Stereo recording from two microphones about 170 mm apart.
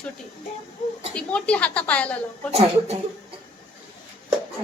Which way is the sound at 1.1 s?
5° left (ahead or behind).